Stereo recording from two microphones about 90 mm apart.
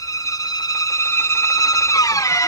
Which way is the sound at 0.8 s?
35° left (ahead or behind).